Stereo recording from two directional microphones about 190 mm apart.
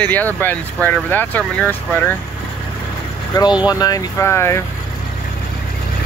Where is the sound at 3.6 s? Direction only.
20° left (ahead or behind).